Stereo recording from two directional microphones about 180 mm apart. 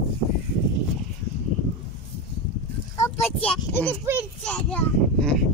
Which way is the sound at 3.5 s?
10° left (ahead or behind).